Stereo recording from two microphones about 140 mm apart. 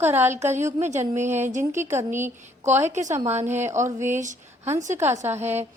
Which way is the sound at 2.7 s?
55° right (ahead or behind).